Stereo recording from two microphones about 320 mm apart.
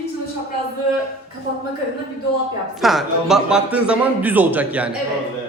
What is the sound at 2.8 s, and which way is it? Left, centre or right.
A man's voice, centre.